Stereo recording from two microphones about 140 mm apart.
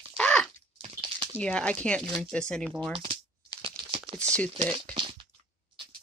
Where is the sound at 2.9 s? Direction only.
40° right (ahead or behind).